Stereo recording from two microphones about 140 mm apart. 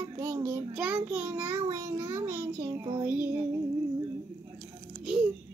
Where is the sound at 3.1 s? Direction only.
15° right (ahead or behind).